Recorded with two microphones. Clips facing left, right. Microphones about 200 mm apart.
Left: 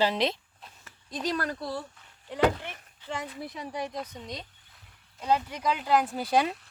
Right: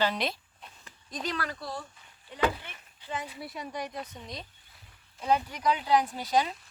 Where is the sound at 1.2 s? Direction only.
40° left (ahead or behind).